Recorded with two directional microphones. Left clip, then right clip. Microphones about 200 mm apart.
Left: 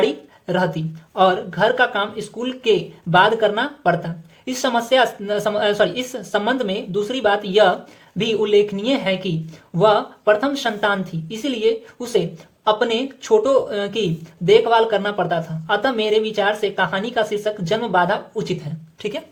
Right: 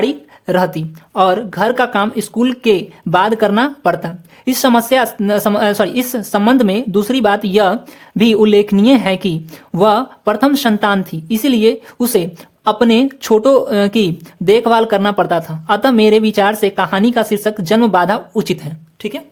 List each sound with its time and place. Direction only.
0.0 s speech: 35° right (ahead or behind)
19.0 s speech: 25° right (ahead or behind)